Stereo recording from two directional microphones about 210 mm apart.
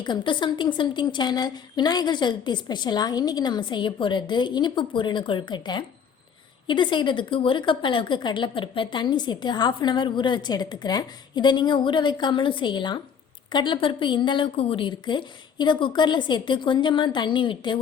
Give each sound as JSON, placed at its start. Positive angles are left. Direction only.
{"t": 0.0, "sound": "a woman's voice", "side_deg": 20}